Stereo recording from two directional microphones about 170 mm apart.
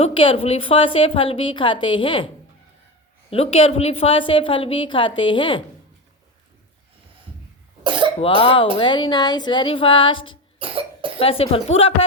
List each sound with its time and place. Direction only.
0.0 s a woman's voice: 30° left (ahead or behind)
7.9 s cough: 30° right (ahead or behind)
8.2 s a woman's voice: 30° left (ahead or behind)
10.6 s cough: 30° right (ahead or behind)
11.2 s a woman's voice: 35° left (ahead or behind)